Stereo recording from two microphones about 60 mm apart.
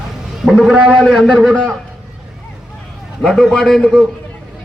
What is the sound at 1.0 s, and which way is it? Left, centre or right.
Speech, centre.